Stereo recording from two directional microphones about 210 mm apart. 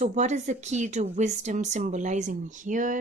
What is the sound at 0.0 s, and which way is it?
Speech, 35° right (ahead or behind).